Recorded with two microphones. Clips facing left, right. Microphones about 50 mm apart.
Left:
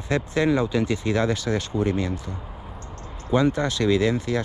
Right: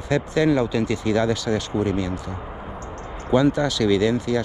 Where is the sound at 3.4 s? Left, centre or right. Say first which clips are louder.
Right 2 dB; left.